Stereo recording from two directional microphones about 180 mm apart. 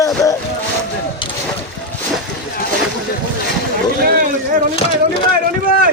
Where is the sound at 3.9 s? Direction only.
55° right (ahead or behind).